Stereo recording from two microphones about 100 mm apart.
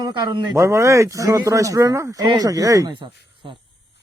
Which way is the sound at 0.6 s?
30° right (ahead or behind).